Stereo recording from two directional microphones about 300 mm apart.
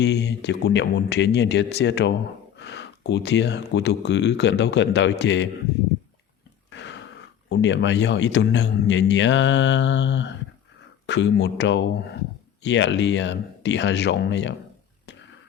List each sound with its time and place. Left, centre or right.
0.0 s speech: left
6.7 s a sound: left
7.5 s speech: left